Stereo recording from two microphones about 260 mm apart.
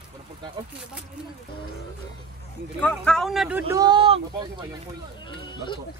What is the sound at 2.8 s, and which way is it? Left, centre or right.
Speech, centre.